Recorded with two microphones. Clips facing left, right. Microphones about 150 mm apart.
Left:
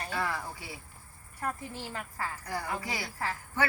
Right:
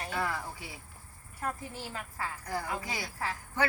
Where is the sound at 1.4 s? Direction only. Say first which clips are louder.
Left 1 dB; 5° right (ahead or behind).